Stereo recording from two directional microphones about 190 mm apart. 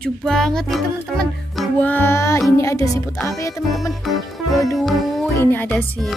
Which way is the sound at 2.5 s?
15° left (ahead or behind).